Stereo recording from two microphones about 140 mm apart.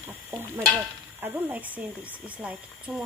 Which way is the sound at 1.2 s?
10° right (ahead or behind).